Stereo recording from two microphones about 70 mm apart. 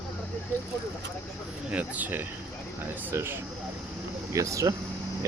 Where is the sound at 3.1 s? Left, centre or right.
Right.